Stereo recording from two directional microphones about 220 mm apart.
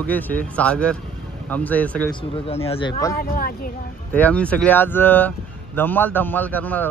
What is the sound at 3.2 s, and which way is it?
Speech, 40° left (ahead or behind).